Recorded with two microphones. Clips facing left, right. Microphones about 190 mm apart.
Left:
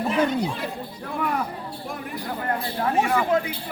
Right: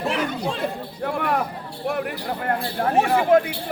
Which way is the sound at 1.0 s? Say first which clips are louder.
Right 3 dB; 75° right (ahead or behind).